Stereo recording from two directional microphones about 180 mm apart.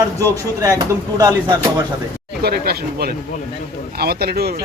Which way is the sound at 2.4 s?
60° right (ahead or behind).